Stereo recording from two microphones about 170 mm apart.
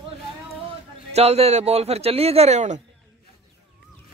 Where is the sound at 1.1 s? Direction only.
40° right (ahead or behind).